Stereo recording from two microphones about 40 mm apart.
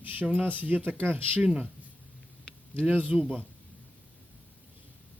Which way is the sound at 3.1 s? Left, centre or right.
Right.